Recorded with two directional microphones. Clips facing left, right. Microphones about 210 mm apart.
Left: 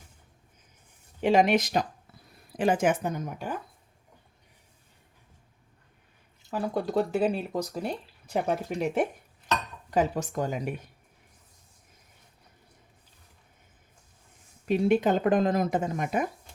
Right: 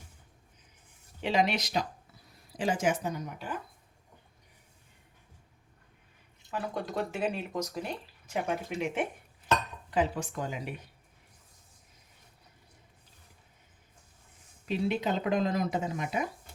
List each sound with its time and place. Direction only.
1.2 s a woman's voice: 50° left (ahead or behind)
6.5 s speech: 35° left (ahead or behind)
9.9 s speech: 45° left (ahead or behind)
14.7 s speech: 50° left (ahead or behind)